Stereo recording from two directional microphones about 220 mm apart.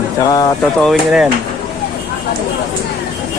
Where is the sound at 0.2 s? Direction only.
15° left (ahead or behind).